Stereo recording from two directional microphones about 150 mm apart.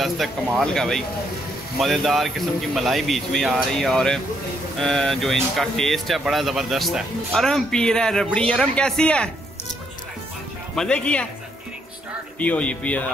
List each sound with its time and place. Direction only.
0.0 s speech: centre (ahead or behind)
10.8 s speech: 5° left (ahead or behind)
12.4 s speech: 10° left (ahead or behind)